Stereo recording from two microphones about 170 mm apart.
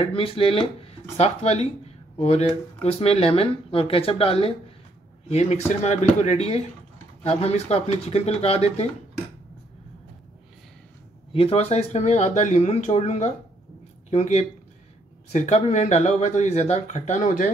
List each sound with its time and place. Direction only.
0.0 s speech: 35° left (ahead or behind)
5.9 s speech: 40° left (ahead or behind)
11.3 s speech: 35° left (ahead or behind)